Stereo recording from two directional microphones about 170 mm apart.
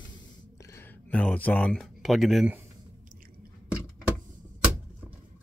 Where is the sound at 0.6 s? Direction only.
15° left (ahead or behind); by 2.5 s centre (ahead or behind).